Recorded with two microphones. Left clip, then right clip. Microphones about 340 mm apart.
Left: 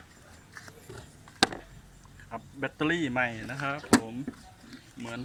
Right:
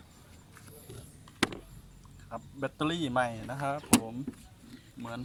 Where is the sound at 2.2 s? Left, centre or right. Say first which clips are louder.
Left 2 dB; centre.